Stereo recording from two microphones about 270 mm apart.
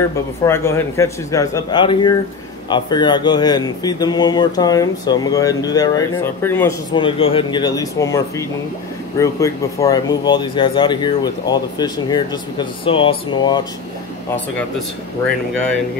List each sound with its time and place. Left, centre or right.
0.5 s speech: centre